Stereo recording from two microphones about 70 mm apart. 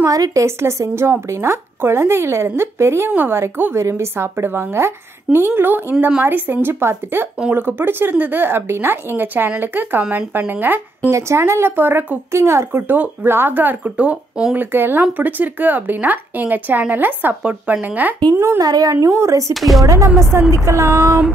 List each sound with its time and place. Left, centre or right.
0.1 s speech: right
0.6 s a woman's voice: right
11.1 s a woman's voice: right
18.3 s a woman's voice: right
18.6 s speech: right
19.5 s speech: centre
19.8 s speech: right